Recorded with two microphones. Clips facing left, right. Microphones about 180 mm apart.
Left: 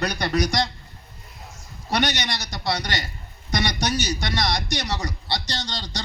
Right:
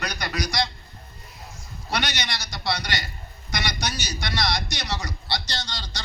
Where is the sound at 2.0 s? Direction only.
20° left (ahead or behind).